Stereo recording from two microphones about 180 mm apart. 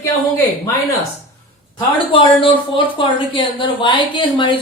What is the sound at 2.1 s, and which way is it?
Speech, 30° left (ahead or behind).